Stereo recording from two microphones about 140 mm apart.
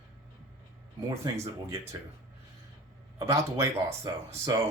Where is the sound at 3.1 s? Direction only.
20° right (ahead or behind).